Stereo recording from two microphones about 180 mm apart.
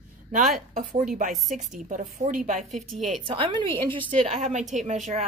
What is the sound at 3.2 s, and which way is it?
A woman's voice, 30° right (ahead or behind).